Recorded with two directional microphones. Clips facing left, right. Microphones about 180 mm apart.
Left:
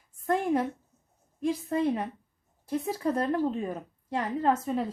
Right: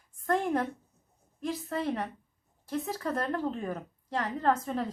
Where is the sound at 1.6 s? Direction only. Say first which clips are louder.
Left 3 dB; 15° left (ahead or behind).